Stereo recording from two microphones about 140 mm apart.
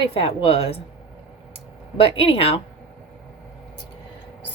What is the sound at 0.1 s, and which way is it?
A woman's voice, 40° left (ahead or behind).